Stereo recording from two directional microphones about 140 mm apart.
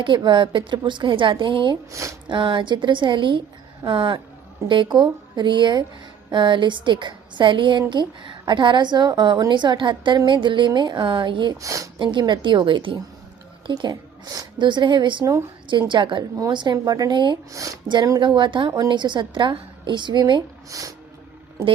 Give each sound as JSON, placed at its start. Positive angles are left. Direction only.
{"t": 0.0, "sound": "a woman's voice", "side_deg": -35}
{"t": 1.9, "sound": "speech", "side_deg": -20}
{"t": 2.3, "sound": "a woman's voice", "side_deg": -35}
{"t": 11.5, "sound": "speech", "side_deg": -25}
{"t": 11.9, "sound": "a woman's voice", "side_deg": -35}
{"t": 15.6, "sound": "a woman's voice", "side_deg": -35}
{"t": 17.5, "sound": "a woman's voice", "side_deg": -25}